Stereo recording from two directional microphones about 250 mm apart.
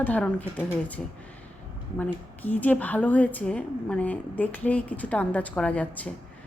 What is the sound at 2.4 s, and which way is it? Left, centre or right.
Speech, centre.